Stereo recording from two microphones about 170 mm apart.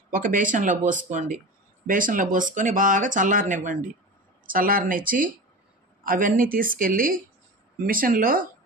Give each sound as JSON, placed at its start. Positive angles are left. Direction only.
{"t": 0.1, "sound": "a woman's voice", "side_deg": -50}